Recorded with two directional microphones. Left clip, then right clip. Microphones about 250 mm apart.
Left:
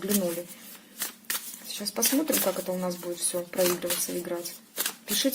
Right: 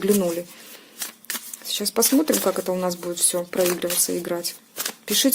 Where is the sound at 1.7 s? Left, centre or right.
Right.